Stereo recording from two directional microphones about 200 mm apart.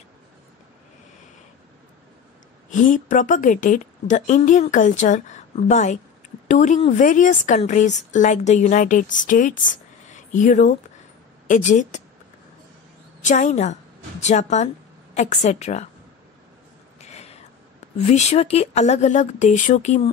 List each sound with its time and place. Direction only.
2.7 s a woman's voice: 40° left (ahead or behind)
13.2 s a woman's voice: 40° left (ahead or behind)
17.0 s a sound: 35° left (ahead or behind)
17.9 s a woman's voice: 35° left (ahead or behind)